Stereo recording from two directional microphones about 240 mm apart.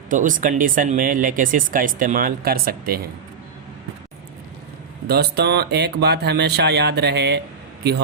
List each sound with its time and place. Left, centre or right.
0.1 s speech: right
5.0 s speech: right